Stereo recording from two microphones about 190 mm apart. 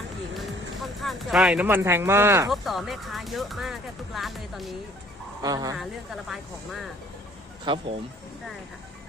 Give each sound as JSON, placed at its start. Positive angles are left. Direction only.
{"t": 0.3, "sound": "speech", "side_deg": 0}
{"t": 2.5, "sound": "speech", "side_deg": 0}
{"t": 5.4, "sound": "speech", "side_deg": -20}
{"t": 5.8, "sound": "speech", "side_deg": 0}
{"t": 7.6, "sound": "speech", "side_deg": -25}